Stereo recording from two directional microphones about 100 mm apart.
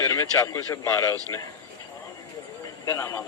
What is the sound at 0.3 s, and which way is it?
Speech, 30° left (ahead or behind).